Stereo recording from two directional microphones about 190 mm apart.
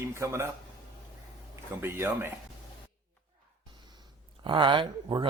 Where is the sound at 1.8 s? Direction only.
10° right (ahead or behind).